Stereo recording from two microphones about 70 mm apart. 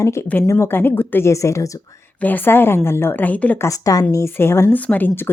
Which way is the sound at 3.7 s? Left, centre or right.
Left.